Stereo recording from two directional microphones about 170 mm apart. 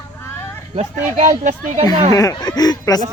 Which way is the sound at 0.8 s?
45° right (ahead or behind).